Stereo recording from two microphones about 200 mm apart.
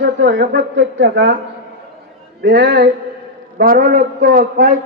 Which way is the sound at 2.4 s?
55° right (ahead or behind).